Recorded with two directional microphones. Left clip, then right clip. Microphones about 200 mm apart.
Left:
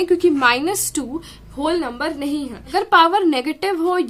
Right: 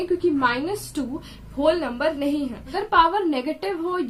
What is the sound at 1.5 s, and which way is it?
A woman's voice, 25° left (ahead or behind).